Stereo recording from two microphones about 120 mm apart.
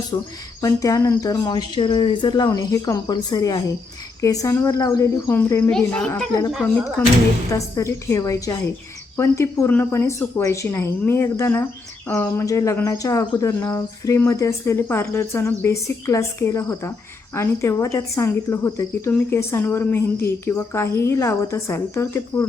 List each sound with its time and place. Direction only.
0.1 s speech: 30° left (ahead or behind)
5.7 s a child's voice: 10° left (ahead or behind)
7.5 s speech: 25° left (ahead or behind)